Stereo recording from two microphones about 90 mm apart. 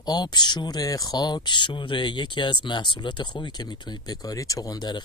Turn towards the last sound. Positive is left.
turn(degrees=45)  # may be behind; listen again after turning